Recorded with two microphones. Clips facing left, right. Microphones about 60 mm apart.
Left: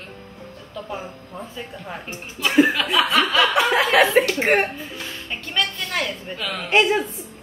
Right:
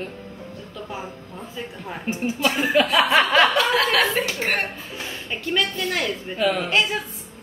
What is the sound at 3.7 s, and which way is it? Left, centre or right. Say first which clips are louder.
Speech: left 4 dB; centre.